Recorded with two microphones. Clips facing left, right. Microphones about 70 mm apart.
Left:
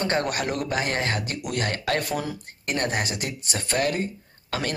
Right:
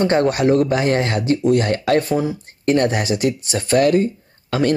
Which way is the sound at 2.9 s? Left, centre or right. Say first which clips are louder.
Right 9 dB; left.